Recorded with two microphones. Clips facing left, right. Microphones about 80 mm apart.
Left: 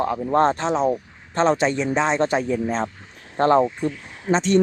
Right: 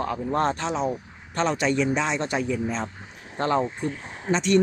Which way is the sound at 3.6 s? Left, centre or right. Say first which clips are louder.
Left 5 dB; right.